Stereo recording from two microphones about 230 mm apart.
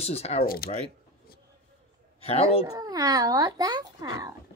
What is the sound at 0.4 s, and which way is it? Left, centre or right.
Speech, left.